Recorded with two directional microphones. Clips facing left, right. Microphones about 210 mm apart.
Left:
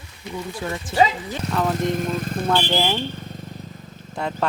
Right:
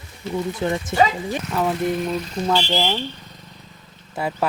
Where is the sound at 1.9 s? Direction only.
45° left (ahead or behind).